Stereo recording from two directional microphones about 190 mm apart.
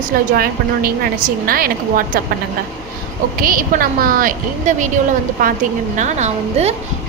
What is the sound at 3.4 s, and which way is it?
A woman's voice, 50° right (ahead or behind).